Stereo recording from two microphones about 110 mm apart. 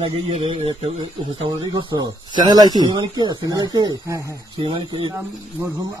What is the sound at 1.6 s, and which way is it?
Speech, 45° right (ahead or behind).